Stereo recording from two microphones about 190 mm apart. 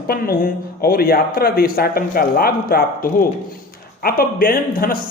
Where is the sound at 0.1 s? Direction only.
50° left (ahead or behind).